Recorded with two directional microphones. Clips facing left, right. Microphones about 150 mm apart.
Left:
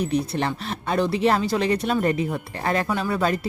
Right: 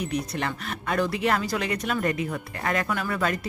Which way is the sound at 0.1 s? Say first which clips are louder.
Left 5 dB; 30° left (ahead or behind).